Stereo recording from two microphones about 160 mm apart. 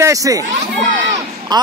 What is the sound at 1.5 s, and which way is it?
Speech, 25° right (ahead or behind).